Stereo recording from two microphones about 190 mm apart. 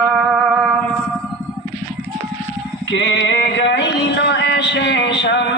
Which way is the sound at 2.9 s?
70° left (ahead or behind).